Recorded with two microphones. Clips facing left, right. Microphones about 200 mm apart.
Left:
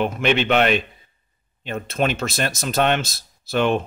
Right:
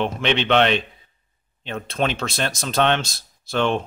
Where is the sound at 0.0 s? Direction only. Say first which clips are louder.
Left 2 dB; 5° left (ahead or behind).